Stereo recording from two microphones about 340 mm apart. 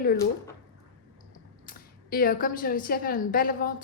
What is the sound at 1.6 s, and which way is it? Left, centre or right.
A woman's voice, left.